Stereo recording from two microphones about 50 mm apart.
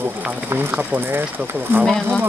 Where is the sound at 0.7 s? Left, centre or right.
Right.